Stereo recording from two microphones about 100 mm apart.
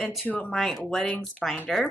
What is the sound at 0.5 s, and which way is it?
Speech, centre (ahead or behind).